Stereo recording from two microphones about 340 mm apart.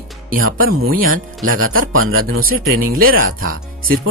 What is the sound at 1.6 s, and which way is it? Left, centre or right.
Speech, right.